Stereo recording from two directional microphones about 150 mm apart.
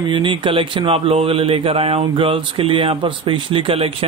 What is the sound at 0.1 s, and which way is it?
Speech, 35° right (ahead or behind).